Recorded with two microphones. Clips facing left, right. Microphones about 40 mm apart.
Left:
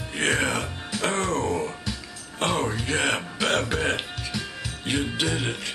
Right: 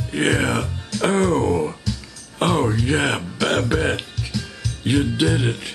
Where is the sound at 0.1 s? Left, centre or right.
Centre.